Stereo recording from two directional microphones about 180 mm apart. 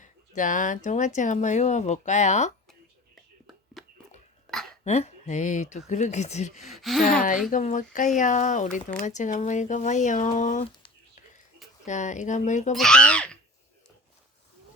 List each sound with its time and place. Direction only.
0.0 s speech: 45° left (ahead or behind)
4.5 s hiccup: centre (ahead or behind)
4.8 s speech: 35° left (ahead or behind)
6.6 s speech: centre (ahead or behind)
7.5 s speech: 45° left (ahead or behind)
11.9 s speech: 40° left (ahead or behind)
12.7 s speech: 5° left (ahead or behind)